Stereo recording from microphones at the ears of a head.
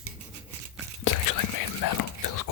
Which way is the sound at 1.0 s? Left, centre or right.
Left.